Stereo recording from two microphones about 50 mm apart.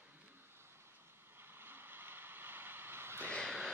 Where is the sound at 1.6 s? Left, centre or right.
Right.